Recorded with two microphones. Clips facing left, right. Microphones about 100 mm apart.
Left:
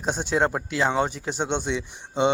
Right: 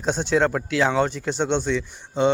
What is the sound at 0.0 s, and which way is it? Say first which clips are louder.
Speech: right 3 dB; 10° left (ahead or behind).